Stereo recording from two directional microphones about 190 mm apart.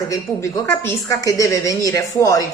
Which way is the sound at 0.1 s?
20° left (ahead or behind).